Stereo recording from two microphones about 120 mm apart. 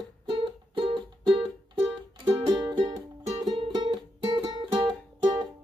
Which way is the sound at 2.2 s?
35° right (ahead or behind).